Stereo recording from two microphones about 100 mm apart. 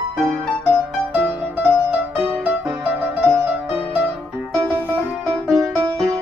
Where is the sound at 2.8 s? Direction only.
15° right (ahead or behind).